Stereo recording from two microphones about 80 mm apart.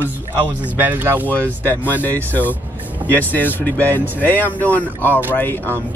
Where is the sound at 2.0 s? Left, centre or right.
Left.